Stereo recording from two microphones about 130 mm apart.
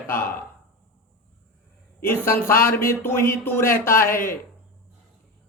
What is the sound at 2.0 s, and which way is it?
Speech, 20° left (ahead or behind).